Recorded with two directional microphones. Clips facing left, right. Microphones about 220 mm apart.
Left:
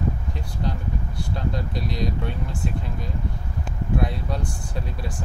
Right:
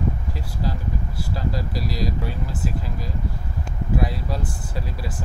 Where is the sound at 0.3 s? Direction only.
5° right (ahead or behind).